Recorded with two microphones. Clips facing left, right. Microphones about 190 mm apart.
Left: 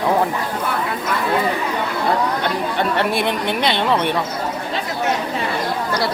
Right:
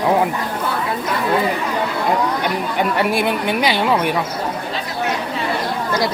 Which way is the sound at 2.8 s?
10° right (ahead or behind).